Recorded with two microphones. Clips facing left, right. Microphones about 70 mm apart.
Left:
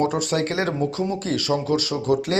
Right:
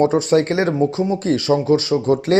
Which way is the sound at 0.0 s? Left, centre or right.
Right.